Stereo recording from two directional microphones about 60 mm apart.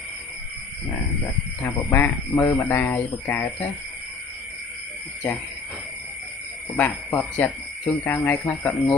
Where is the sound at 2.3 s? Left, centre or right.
Left.